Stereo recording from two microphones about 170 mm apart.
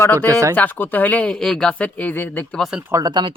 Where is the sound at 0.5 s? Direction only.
10° left (ahead or behind); by 2.9 s 5° right (ahead or behind).